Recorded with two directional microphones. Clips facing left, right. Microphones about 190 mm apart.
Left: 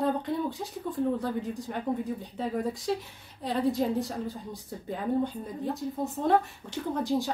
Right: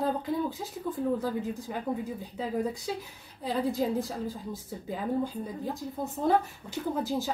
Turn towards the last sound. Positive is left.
turn(degrees=0)  # may be behind; listen again after turning